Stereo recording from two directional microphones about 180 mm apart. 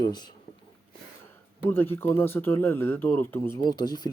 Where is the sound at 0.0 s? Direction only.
25° left (ahead or behind).